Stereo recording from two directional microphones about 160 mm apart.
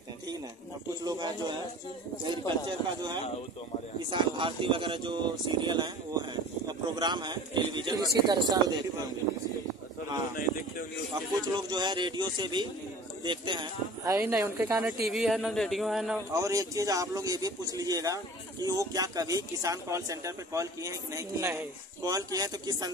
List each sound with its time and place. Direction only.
1.0 s a man's voice: 25° right (ahead or behind)
4.1 s a man's voice: 30° right (ahead or behind)
10.3 s speech: 60° left (ahead or behind)
11.5 s a man's voice: 25° right (ahead or behind); by 16.2 s centre (ahead or behind)
16.3 s a man's voice: 20° right (ahead or behind)